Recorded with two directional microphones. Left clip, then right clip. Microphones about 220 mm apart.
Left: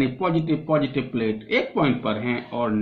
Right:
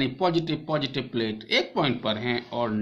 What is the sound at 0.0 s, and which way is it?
Speech, 50° right (ahead or behind).